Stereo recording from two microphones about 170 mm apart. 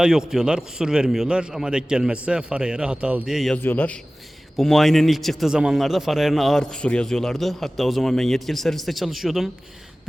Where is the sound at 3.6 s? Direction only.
10° left (ahead or behind).